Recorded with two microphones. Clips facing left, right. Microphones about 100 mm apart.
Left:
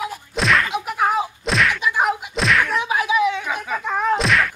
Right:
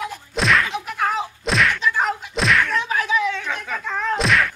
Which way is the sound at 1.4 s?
Centre (ahead or behind).